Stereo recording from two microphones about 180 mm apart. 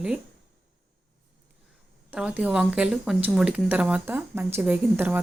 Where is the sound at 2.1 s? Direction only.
5° right (ahead or behind).